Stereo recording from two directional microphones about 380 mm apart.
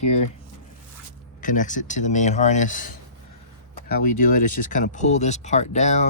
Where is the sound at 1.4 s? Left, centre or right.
Centre.